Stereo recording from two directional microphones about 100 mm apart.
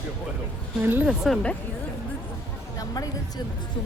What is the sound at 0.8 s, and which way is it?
Speech, 20° right (ahead or behind).